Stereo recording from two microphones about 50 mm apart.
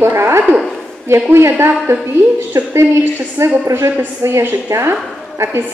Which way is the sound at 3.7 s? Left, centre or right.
Right.